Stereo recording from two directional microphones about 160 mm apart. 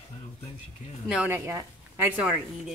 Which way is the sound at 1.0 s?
10° right (ahead or behind).